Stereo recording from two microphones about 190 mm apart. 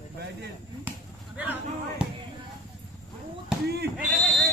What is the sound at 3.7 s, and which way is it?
Sheep, 60° right (ahead or behind).